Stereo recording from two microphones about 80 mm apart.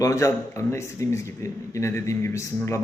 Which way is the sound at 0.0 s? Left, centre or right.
Left.